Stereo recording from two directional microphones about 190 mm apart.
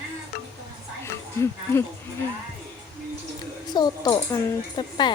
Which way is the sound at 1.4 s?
15° left (ahead or behind).